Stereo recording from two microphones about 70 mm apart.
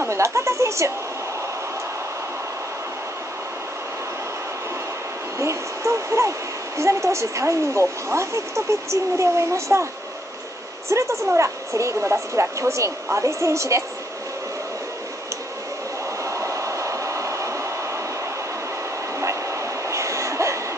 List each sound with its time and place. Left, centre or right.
0.0 s a woman's voice: right
5.4 s speech: right
10.9 s speech: right
16.3 s train: right
19.1 s train: right